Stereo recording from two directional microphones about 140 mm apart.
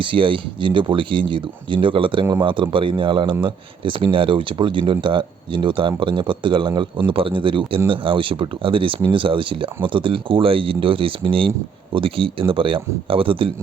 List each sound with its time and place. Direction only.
0.0 s speech: 35° right (ahead or behind)